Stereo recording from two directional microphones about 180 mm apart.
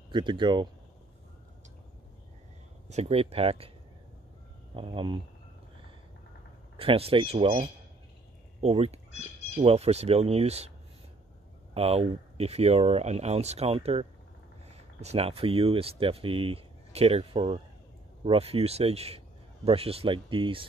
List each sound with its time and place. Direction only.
0.1 s speech: 25° right (ahead or behind)
2.9 s speech: 35° right (ahead or behind)
4.7 s speech: 30° right (ahead or behind)
6.8 s speech: 30° right (ahead or behind)
11.7 s speech: 35° right (ahead or behind)